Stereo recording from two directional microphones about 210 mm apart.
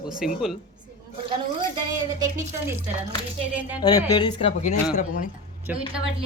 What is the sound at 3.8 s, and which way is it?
Speech, 20° left (ahead or behind).